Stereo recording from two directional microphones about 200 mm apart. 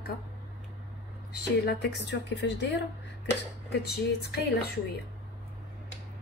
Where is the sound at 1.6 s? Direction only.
55° left (ahead or behind).